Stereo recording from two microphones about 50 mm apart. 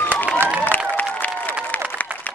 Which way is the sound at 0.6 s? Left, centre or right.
Left.